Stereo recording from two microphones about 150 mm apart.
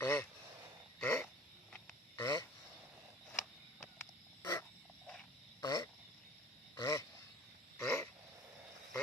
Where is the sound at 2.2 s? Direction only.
25° left (ahead or behind).